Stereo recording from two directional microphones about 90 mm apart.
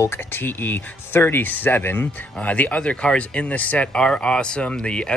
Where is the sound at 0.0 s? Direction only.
25° left (ahead or behind).